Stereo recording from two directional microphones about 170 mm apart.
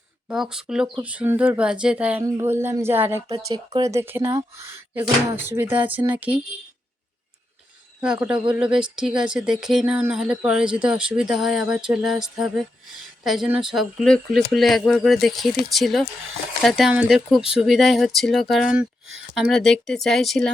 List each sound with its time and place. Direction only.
0.3 s speech: 5° right (ahead or behind)
8.0 s speech: 5° right (ahead or behind)